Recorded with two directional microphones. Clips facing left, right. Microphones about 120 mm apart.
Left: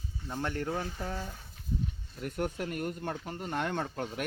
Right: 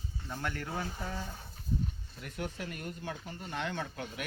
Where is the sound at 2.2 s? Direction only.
50° left (ahead or behind).